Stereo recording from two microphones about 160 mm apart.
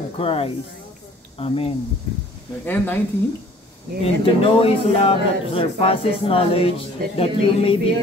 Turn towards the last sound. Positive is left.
turn(degrees=35)  # may be behind; listen again after turning